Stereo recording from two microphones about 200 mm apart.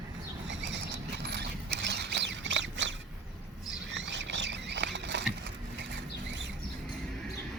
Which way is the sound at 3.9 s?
60° right (ahead or behind).